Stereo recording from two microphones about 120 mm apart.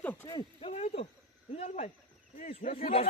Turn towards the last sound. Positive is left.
turn(degrees=55)  # may be behind; listen again after turning